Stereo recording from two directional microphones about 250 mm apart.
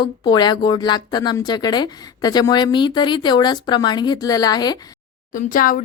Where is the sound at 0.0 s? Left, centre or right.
Centre.